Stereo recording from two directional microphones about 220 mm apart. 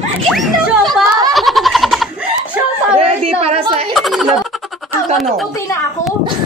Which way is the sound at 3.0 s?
25° right (ahead or behind).